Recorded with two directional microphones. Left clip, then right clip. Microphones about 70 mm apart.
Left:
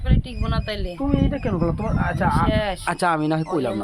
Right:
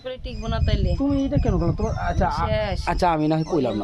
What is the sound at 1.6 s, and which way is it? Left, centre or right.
Speech, right.